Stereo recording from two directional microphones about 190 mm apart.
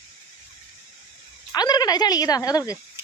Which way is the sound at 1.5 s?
20° left (ahead or behind).